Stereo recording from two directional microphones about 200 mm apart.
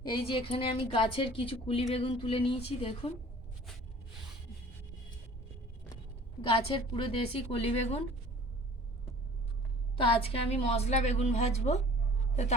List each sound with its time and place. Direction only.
0.0 s speech: 25° left (ahead or behind)
6.5 s speech: 25° left (ahead or behind)
10.0 s a woman's voice: 30° left (ahead or behind)